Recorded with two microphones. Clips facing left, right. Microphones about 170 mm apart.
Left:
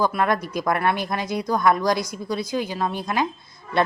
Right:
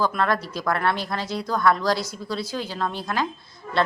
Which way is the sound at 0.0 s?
15° left (ahead or behind).